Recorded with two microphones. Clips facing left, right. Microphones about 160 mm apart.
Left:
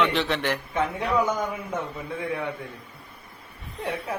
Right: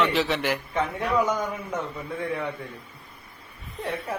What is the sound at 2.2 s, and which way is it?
Speech, centre (ahead or behind).